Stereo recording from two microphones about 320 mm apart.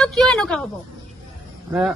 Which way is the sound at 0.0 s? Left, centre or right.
Centre.